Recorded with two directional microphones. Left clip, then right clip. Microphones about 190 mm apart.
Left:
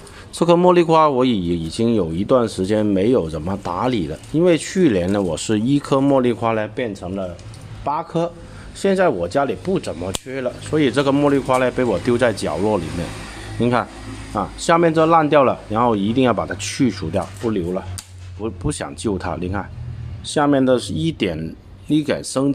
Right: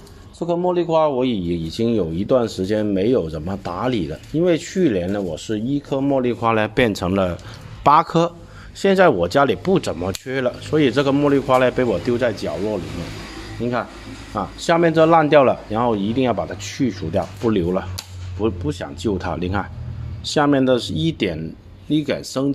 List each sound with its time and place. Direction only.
0.4 s speech: 45° left (ahead or behind); by 6.3 s 15° left (ahead or behind)
6.7 s speech: 40° right (ahead or behind)
7.8 s a man's voice: 35° right (ahead or behind)
8.8 s speech: 15° right (ahead or behind)
10.7 s speech: centre (ahead or behind)
12.1 s speech: 15° left (ahead or behind)
17.1 s speech: centre (ahead or behind)
17.5 s speech: 10° right (ahead or behind)
18.7 s speech: 15° left (ahead or behind)
19.1 s speech: centre (ahead or behind)